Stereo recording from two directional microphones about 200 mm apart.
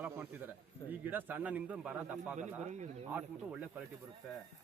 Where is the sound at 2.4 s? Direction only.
35° right (ahead or behind).